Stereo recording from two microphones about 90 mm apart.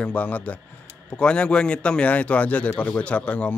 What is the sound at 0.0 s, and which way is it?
A man's voice, 15° left (ahead or behind).